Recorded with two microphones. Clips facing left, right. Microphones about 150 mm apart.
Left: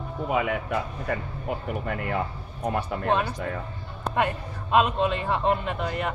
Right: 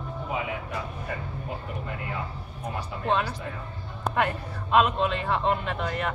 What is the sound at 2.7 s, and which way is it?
Speech, 60° left (ahead or behind).